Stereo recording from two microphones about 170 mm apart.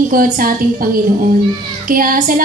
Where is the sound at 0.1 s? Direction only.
55° right (ahead or behind).